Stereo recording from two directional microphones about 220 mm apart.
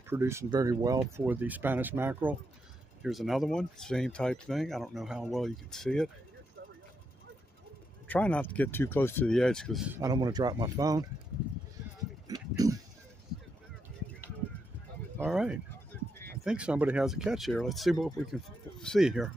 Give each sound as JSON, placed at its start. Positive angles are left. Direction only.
{"t": 0.1, "sound": "speech", "side_deg": -10}
{"t": 8.1, "sound": "speech", "side_deg": 5}
{"t": 9.9, "sound": "speech", "side_deg": -15}
{"t": 12.6, "sound": "a sound", "side_deg": -15}
{"t": 15.1, "sound": "speech", "side_deg": -5}